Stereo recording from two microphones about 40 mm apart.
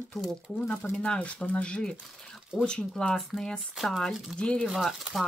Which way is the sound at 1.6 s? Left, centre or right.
Left.